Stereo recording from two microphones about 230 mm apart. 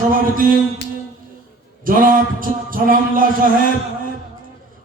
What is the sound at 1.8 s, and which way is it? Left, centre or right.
A man's voice, right.